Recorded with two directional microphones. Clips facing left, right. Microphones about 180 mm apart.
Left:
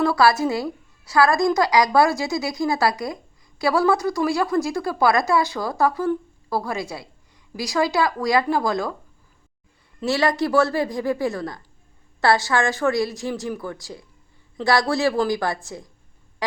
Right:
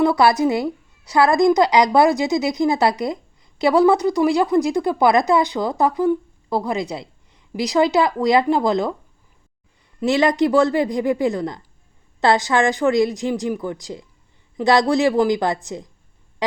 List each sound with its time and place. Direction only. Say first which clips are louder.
0.0 s speech: right 3 dB; 20° right (ahead or behind)
10.0 s a woman's voice: right 4 dB; 20° right (ahead or behind)